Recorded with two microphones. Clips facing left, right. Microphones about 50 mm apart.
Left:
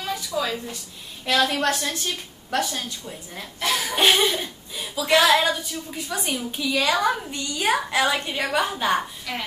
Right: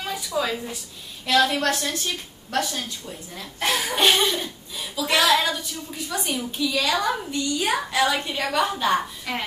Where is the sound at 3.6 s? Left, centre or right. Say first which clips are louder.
Right 1 dB; right.